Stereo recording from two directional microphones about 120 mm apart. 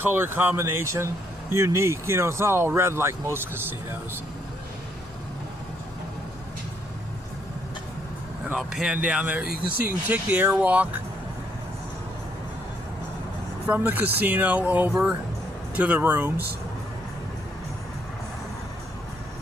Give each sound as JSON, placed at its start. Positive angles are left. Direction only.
{"t": 0.0, "sound": "speech", "side_deg": -20}
{"t": 8.5, "sound": "speech", "side_deg": -5}
{"t": 13.7, "sound": "speech", "side_deg": -15}